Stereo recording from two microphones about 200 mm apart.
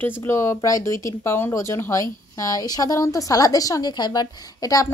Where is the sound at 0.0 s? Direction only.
10° left (ahead or behind).